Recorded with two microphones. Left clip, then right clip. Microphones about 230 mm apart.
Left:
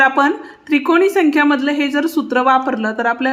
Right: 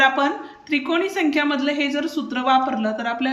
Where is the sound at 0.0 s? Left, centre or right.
Left.